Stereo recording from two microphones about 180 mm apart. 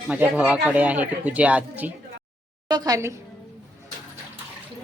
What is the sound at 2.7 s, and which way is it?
Speech, 20° right (ahead or behind).